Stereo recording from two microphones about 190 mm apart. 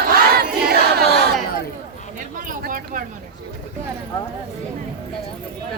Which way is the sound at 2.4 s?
45° right (ahead or behind).